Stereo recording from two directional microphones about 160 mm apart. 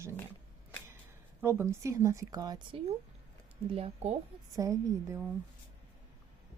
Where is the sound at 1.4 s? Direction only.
15° right (ahead or behind).